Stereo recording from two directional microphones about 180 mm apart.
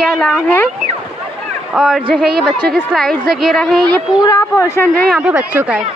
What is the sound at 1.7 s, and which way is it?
A woman's voice, centre (ahead or behind).